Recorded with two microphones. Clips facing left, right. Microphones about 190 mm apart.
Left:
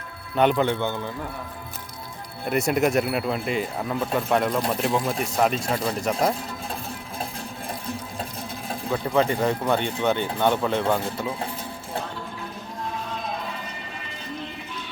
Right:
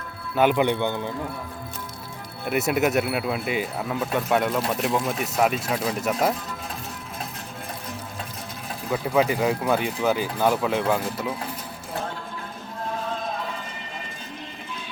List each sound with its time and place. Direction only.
0.3 s speech: 5° right (ahead or behind)
0.6 s speech: 15° right (ahead or behind)
2.5 s speech: 5° right (ahead or behind)
8.9 s speech: 5° right (ahead or behind)